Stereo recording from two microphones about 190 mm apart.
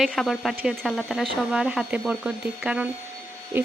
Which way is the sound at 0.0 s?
Centre (ahead or behind).